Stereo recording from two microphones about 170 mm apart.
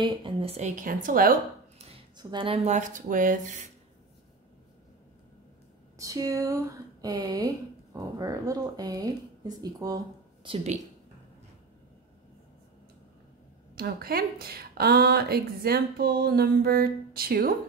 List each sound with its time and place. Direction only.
0.0 s a woman's voice: 30° right (ahead or behind); by 1.3 s 55° right (ahead or behind)
2.1 s a woman's voice: 30° right (ahead or behind); by 3.3 s 50° right (ahead or behind)
5.9 s speech: 20° right (ahead or behind); by 10.8 s 35° right (ahead or behind)
13.7 s a woman's voice: 60° right (ahead or behind)